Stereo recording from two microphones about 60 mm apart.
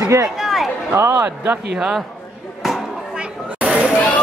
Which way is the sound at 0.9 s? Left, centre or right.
Right.